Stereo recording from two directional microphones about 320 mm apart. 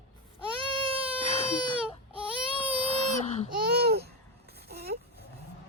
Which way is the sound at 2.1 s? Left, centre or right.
Centre.